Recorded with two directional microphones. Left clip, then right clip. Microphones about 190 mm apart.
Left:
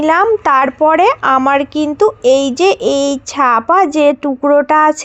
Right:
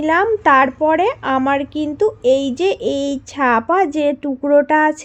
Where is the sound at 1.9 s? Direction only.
5° left (ahead or behind).